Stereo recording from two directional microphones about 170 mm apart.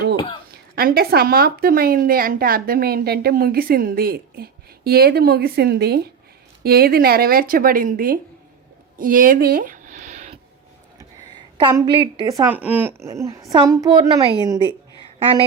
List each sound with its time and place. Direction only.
0.8 s a woman's voice: 65° right (ahead or behind)
9.0 s a sound: 55° right (ahead or behind)
11.6 s a woman's voice: 25° right (ahead or behind)
12.5 s a woman's voice: 10° right (ahead or behind)